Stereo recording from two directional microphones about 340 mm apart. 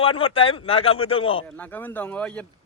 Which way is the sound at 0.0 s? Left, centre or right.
Centre.